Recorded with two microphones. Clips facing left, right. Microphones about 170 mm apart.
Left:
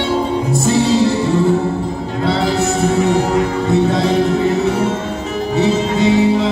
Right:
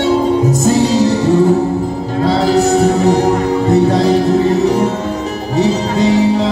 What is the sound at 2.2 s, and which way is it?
Music, 40° right (ahead or behind).